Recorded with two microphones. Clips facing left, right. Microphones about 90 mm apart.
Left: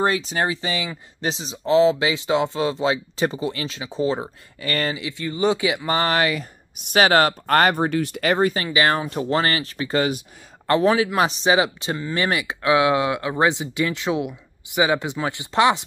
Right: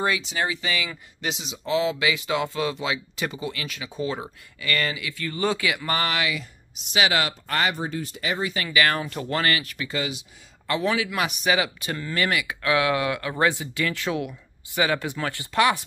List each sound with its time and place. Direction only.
0.0 s speech: 40° left (ahead or behind); by 6.0 s 25° left (ahead or behind)
6.0 s speech: 40° left (ahead or behind)
8.6 s speech: 25° left (ahead or behind)
9.9 s speech: 50° left (ahead or behind); by 15.8 s 20° left (ahead or behind)